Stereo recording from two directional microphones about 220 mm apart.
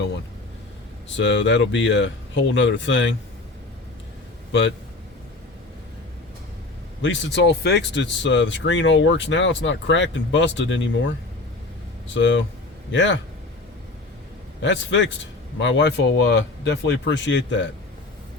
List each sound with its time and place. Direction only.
1.1 s speech: 55° left (ahead or behind)
7.0 s speech: 50° left (ahead or behind)
12.1 s speech: 60° left (ahead or behind)
14.6 s speech: 55° left (ahead or behind)